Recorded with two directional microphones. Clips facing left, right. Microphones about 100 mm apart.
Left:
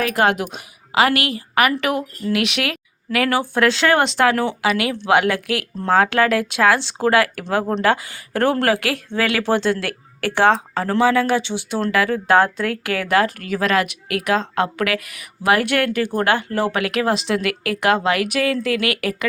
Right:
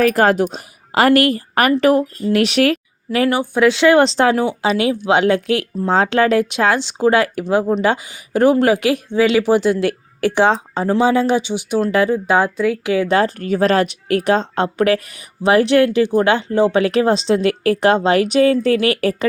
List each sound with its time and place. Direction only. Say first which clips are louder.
0.0 s speech: right 5 dB; 40° right (ahead or behind); by 3.8 s 10° right (ahead or behind)
4.0 s speech: right 3 dB; 30° right (ahead or behind)
12.3 s speech: right 1 dB; 10° right (ahead or behind)
12.8 s speech: right 1 dB; 20° right (ahead or behind)